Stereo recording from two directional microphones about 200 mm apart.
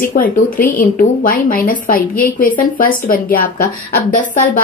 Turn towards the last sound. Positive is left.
turn(degrees=45)  # may be behind; listen again after turning